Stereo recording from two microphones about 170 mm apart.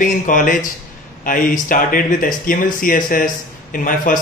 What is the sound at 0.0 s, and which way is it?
Speech, 55° left (ahead or behind).